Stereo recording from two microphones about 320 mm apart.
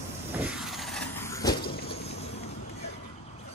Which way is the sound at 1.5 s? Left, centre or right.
Left.